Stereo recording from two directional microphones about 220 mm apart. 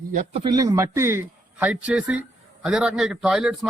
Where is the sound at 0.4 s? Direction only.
15° right (ahead or behind).